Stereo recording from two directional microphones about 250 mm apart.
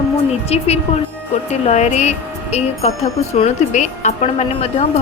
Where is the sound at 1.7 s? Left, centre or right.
Left.